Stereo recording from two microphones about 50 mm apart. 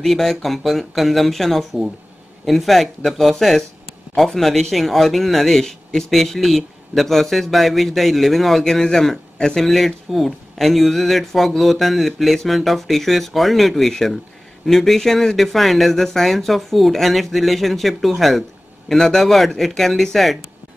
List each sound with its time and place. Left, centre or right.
0.0 s speech: centre